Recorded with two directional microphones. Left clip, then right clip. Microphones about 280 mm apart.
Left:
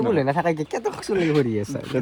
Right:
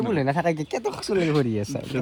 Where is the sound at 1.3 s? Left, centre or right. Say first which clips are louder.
Left 2 dB; centre.